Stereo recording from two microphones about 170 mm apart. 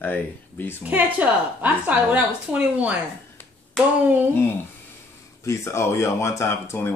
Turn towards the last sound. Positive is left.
turn(degrees=15)  # may be behind; listen again after turning